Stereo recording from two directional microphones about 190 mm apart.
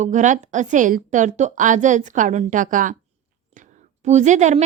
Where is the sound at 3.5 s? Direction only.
40° right (ahead or behind).